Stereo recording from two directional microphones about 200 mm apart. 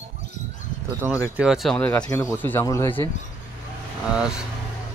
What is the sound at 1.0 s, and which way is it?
Speech, 10° right (ahead or behind).